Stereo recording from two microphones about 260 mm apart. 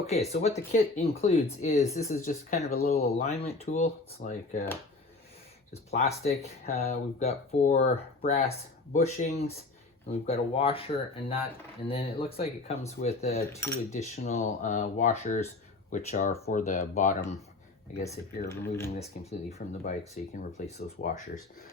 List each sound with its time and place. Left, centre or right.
0.1 s speech: left
5.7 s speech: left
13.5 s speech: centre
13.9 s speech: left
18.0 s speech: centre
18.9 s speech: left